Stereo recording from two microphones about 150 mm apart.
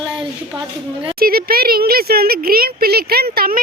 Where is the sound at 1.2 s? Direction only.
80° right.